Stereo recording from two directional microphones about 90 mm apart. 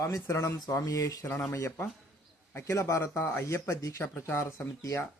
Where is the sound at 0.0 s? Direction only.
40° left (ahead or behind).